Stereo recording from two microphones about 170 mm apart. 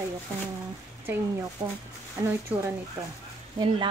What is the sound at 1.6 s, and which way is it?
Speech, 25° right (ahead or behind).